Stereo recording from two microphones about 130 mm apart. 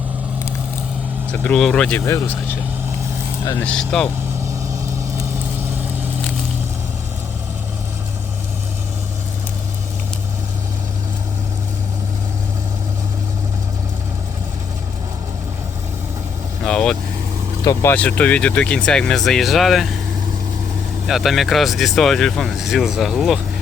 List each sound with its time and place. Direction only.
1.3 s speech: 10° left (ahead or behind)
2.0 s speech: 20° left (ahead or behind)
3.6 s speech: 5° left (ahead or behind)
16.6 s speech: 5° left (ahead or behind)
21.1 s speech: centre (ahead or behind)